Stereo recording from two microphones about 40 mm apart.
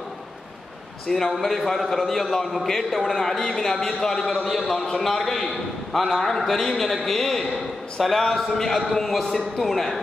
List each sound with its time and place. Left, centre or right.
1.1 s a man's voice: centre